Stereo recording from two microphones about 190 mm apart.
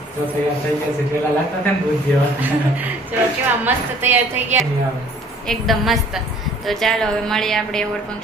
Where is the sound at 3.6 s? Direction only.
10° right (ahead or behind).